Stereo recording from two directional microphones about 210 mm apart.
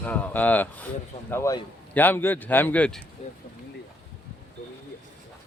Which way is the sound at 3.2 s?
30° left (ahead or behind).